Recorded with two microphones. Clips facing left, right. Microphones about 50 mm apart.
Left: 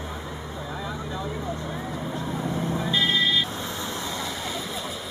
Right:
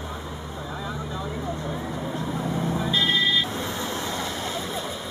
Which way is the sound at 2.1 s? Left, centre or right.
Centre.